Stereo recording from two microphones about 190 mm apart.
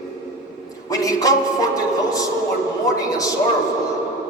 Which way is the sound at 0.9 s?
20° left (ahead or behind).